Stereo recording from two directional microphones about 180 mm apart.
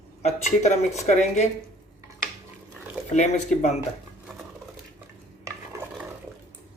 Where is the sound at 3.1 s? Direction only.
40° left (ahead or behind).